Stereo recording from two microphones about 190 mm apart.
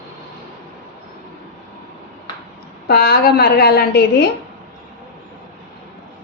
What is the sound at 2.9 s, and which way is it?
A woman's voice, 55° left (ahead or behind).